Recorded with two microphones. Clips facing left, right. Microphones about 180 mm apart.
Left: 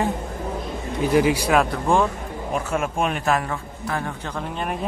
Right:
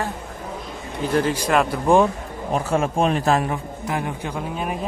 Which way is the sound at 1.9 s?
15° right (ahead or behind).